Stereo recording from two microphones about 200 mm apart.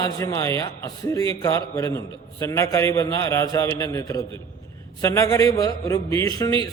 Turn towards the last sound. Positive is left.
turn(degrees=15)  # may be behind; listen again after turning